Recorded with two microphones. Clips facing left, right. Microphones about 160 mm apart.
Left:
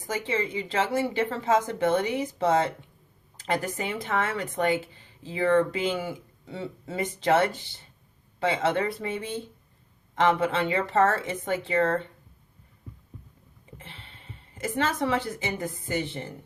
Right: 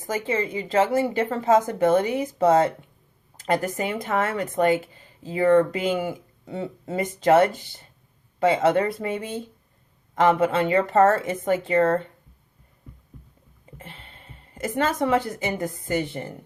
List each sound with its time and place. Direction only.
0.1 s speech: 40° right (ahead or behind)
10.4 s speech: 45° right (ahead or behind)
13.7 s speech: 45° right (ahead or behind)